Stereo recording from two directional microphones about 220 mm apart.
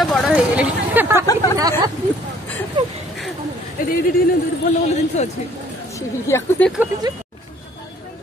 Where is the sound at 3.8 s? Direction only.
40° left (ahead or behind).